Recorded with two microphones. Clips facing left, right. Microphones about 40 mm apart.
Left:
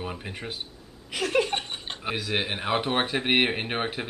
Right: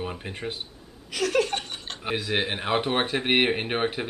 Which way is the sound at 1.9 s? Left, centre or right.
Centre.